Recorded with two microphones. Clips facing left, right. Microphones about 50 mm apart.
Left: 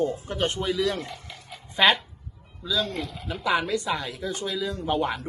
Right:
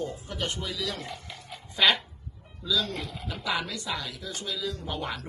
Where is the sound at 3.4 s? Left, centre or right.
Left.